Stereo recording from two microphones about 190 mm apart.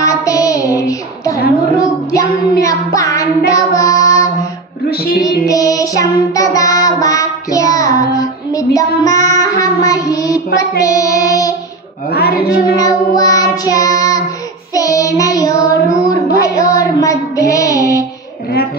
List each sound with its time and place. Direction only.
0.0 s child singing: 20° left (ahead or behind)
4.8 s music: 55° left (ahead or behind)
5.5 s child singing: 20° left (ahead or behind)
10.8 s music: 15° left (ahead or behind)
12.1 s a sound: 55° left (ahead or behind)
12.7 s child singing: 20° left (ahead or behind)